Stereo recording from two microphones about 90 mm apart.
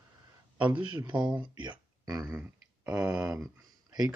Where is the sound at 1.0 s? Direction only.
60° right (ahead or behind).